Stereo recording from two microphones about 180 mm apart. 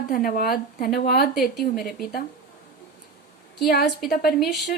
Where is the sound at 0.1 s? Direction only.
55° left (ahead or behind).